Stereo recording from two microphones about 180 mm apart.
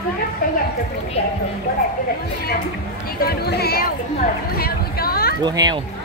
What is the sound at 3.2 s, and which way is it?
Speech, 60° left (ahead or behind).